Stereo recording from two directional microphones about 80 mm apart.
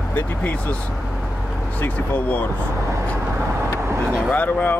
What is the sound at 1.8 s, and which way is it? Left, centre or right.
Speech, left.